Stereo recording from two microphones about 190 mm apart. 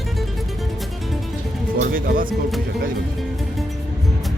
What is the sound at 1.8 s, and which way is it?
Speech, 45° right (ahead or behind).